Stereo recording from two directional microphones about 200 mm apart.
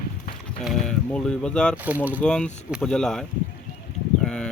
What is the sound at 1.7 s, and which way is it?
Speech, 10° right (ahead or behind).